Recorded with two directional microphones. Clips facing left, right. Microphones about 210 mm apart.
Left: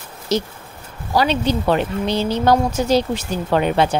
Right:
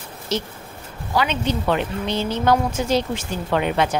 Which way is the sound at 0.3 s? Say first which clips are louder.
Left 5 dB; 40° left (ahead or behind).